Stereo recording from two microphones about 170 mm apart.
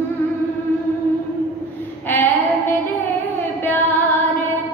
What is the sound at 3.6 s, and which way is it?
Music, 10° left (ahead or behind).